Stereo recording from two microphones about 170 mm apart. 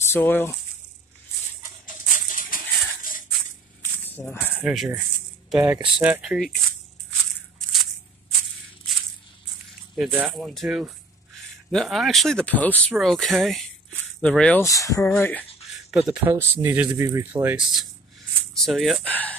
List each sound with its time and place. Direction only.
0.1 s speech: 10° left (ahead or behind)
1.6 s a sound: 50° left (ahead or behind)
4.0 s music: 10° left (ahead or behind)
4.6 s speech: 10° right (ahead or behind)
7.5 s a sound: centre (ahead or behind)
9.9 s speech: 5° right (ahead or behind)
14.6 s speech: 20° left (ahead or behind)
15.9 s speech: 5° right (ahead or behind)
18.5 s speech: centre (ahead or behind)